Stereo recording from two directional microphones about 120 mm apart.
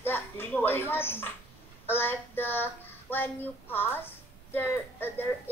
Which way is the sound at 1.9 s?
15° left (ahead or behind).